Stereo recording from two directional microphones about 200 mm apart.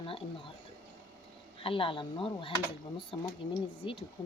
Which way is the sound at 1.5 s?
25° left (ahead or behind).